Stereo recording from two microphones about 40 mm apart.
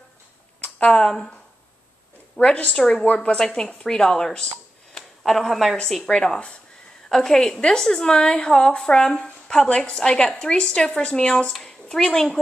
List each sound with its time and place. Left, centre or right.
0.6 s speech: left
2.4 s a woman's voice: left
3.4 s a woman's voice: centre
5.2 s speech: centre
6.0 s a woman's voice: left